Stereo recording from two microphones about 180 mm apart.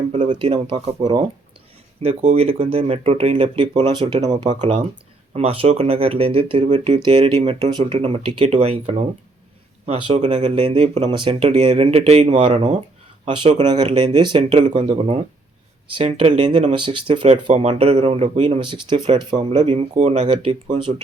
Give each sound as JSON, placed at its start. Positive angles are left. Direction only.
{"t": 0.3, "sound": "speech", "side_deg": -30}
{"t": 4.6, "sound": "speech", "side_deg": -40}
{"t": 16.7, "sound": "speech", "side_deg": -25}